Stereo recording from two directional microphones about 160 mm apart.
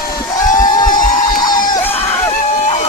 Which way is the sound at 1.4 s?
25° left (ahead or behind).